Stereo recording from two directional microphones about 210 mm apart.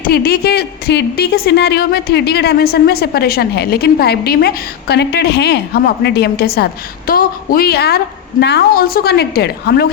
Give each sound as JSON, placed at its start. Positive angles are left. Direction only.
{"t": 0.0, "sound": "a woman's voice", "side_deg": 50}